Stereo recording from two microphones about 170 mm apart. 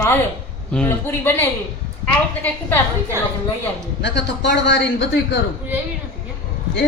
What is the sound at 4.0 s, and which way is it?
Speech, 90° left.